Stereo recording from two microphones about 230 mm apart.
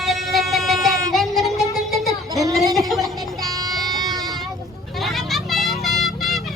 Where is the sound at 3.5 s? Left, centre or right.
Centre.